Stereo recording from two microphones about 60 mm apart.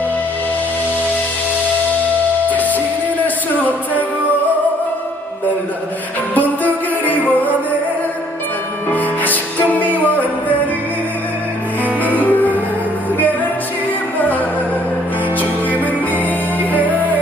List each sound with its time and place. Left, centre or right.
2.5 s music: left
6.3 s music: left
8.9 s music: left
11.8 s music: left
14.2 s music: left